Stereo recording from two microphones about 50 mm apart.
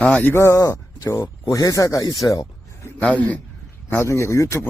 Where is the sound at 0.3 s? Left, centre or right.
Left.